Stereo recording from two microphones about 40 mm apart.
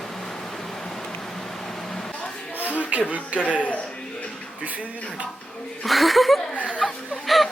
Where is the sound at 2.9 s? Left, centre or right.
Right.